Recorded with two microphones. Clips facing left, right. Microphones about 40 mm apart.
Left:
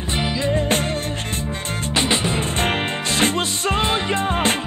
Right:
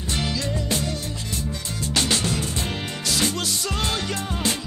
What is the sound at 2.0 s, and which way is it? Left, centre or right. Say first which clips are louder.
Music: left 3 dB; left.